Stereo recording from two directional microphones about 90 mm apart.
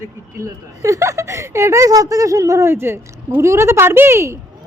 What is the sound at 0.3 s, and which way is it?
Speech, 35° right (ahead or behind).